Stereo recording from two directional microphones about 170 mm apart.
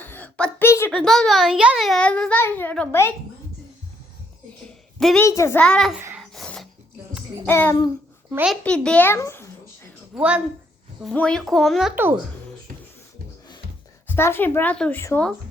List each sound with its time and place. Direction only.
0.0 s a sound: 10° left (ahead or behind)
0.9 s a child's voice: centre (ahead or behind)
4.9 s a woman's voice: centre (ahead or behind)
5.2 s a woman's voice: 15° left (ahead or behind)
5.6 s a child's voice: centre (ahead or behind)
6.3 s a sound: centre (ahead or behind)
7.4 s a woman's voice: 10° left (ahead or behind)
8.3 s a child's voice: 10° right (ahead or behind)
8.6 s babbling: 5° left (ahead or behind)
10.2 s a woman's voice: 5° right (ahead or behind)
11.0 s a child's voice: 5° left (ahead or behind)
14.1 s a woman's voice: 15° left (ahead or behind)